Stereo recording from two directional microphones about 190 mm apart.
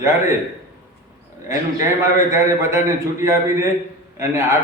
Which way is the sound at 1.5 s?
15° right (ahead or behind).